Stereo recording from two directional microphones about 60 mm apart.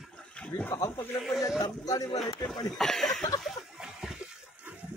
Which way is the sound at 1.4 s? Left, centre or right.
Left.